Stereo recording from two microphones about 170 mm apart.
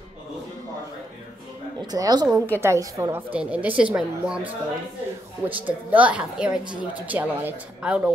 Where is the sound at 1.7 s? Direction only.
20° right (ahead or behind).